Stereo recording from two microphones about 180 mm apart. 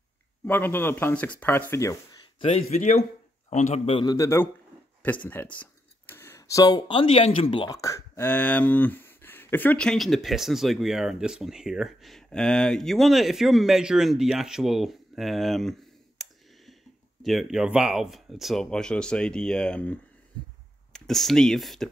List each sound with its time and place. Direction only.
0.5 s speech: 10° left (ahead or behind)
2.7 s a man's voice: 40° left (ahead or behind); by 15.7 s centre (ahead or behind)
16.2 s clicking: centre (ahead or behind)
17.2 s speech: centre (ahead or behind)